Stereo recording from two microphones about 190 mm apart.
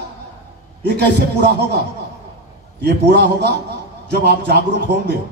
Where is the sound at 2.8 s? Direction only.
55° right (ahead or behind).